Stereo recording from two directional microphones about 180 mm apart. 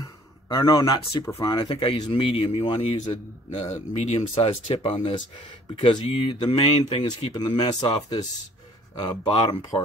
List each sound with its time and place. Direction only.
0.5 s speech: 20° left (ahead or behind)